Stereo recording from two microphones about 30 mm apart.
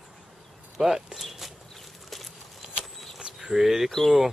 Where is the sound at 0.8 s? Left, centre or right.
Centre.